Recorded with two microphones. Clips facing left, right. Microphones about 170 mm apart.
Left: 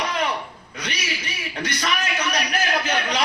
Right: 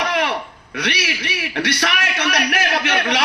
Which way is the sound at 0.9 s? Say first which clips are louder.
Right 6 dB; 80° right.